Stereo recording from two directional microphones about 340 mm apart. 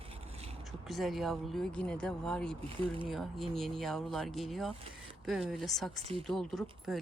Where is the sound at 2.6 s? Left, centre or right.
Centre.